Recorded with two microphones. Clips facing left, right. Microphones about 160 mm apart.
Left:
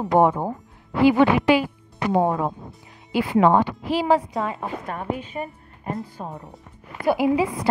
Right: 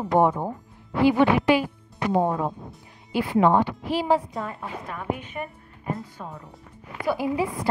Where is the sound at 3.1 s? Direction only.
90° left.